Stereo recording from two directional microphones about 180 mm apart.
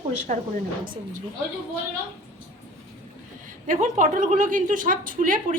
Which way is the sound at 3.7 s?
45° right (ahead or behind).